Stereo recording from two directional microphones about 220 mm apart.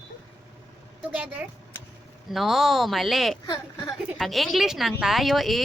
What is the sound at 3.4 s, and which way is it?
Speech, 15° left (ahead or behind).